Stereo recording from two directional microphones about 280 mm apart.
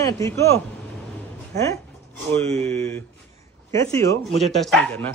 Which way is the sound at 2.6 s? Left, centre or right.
Right.